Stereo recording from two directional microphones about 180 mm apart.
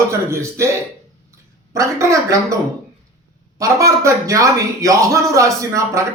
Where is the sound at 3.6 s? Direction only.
15° right (ahead or behind).